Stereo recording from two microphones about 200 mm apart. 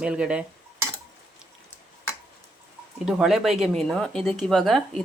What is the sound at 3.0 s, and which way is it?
Speech, centre (ahead or behind).